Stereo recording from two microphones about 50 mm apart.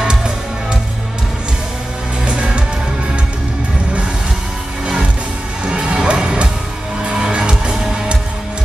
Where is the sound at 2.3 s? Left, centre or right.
Right.